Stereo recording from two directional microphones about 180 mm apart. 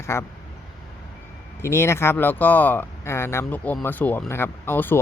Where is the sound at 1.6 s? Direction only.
15° left (ahead or behind).